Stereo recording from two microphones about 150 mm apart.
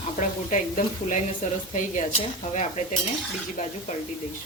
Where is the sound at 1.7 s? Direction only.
55° left (ahead or behind).